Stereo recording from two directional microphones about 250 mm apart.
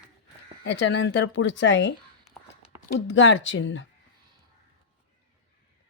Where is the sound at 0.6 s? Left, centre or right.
Left.